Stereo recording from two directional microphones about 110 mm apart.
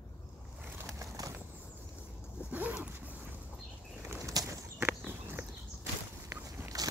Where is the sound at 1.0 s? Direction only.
30° right (ahead or behind).